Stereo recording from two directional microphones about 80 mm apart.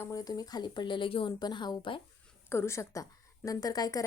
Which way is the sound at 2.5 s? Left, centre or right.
Left.